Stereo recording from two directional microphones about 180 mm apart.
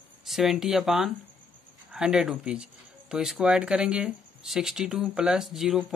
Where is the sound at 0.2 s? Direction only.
Centre (ahead or behind).